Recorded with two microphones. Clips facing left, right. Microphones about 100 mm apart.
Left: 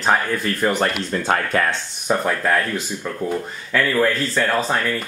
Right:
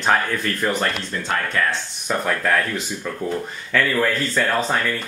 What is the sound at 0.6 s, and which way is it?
Speech, 15° left (ahead or behind).